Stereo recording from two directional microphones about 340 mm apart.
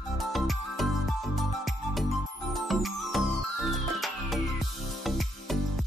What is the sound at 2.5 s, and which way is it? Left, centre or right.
Music, centre.